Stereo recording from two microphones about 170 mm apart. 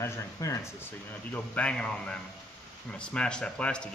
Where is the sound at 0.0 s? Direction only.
15° left (ahead or behind).